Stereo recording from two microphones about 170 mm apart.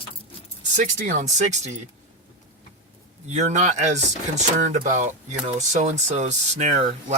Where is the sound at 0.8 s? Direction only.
50° right (ahead or behind).